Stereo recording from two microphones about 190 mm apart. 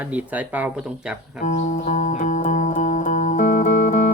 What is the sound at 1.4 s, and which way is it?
Music, 40° left (ahead or behind).